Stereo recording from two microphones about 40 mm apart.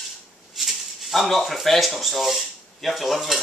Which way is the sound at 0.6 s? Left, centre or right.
Centre.